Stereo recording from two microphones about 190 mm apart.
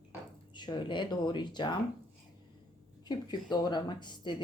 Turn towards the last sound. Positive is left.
turn(degrees=25)  # may be behind; listen again after turning